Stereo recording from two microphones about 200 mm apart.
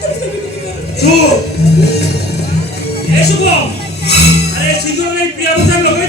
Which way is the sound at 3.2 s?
55° left (ahead or behind).